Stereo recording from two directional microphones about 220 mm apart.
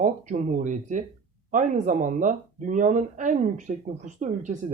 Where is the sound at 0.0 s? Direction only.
35° right (ahead or behind).